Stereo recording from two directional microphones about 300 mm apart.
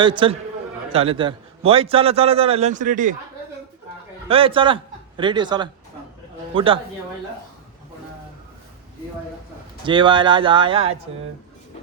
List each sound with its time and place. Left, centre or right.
0.0 s a man's voice: centre
4.3 s a man's voice: centre
9.8 s speech: centre